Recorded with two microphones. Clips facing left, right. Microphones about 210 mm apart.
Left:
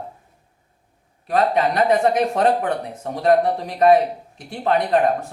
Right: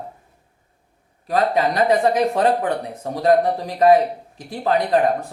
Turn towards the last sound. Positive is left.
turn(degrees=-35)  # may be behind; listen again after turning